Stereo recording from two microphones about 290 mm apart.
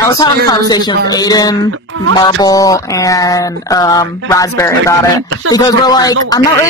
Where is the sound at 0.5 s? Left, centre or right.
Centre.